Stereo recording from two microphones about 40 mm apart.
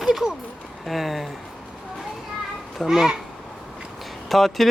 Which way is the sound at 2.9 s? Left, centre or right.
Centre.